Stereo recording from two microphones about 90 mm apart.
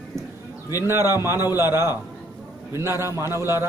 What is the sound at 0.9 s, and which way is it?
A man's voice, 30° right (ahead or behind).